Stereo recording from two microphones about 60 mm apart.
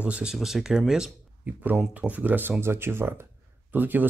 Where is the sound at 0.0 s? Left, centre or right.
Centre.